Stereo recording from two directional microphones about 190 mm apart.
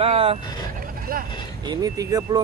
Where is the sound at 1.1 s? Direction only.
50° right (ahead or behind).